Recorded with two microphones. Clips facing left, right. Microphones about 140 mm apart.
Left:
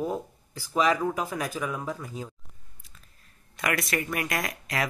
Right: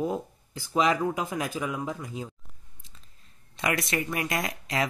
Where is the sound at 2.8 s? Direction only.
25° right (ahead or behind).